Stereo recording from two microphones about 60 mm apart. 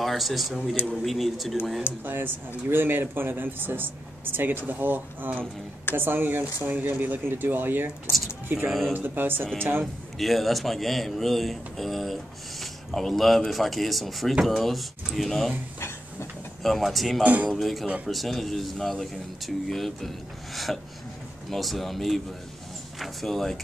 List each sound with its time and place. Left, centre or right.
0.0 s speech: centre
2.0 s speech: right
8.6 s speech: centre
8.9 s speech: right
10.1 s speech: centre
16.6 s speech: centre
17.2 s a man's voice: right
17.5 s speech: centre